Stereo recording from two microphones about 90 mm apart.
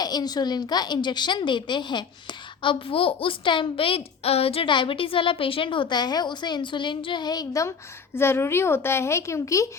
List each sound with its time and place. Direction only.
0.0 s a woman's voice: 45° left (ahead or behind)
2.6 s a woman's voice: 75° left (ahead or behind); by 7.7 s 45° left (ahead or behind)
8.1 s speech: 25° left (ahead or behind)